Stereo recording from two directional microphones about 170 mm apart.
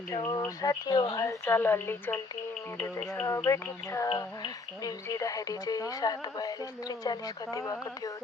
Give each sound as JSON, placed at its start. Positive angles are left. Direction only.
{"t": 0.3, "sound": "a woman's voice", "side_deg": 20}